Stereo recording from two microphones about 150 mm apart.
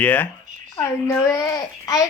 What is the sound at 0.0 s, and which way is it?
A child's voice, 10° left (ahead or behind).